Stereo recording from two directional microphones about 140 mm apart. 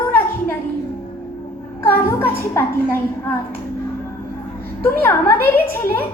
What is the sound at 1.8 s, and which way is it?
Speech, 15° left (ahead or behind).